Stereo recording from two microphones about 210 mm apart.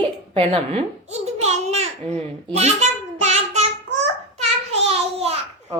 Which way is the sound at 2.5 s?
30° right (ahead or behind).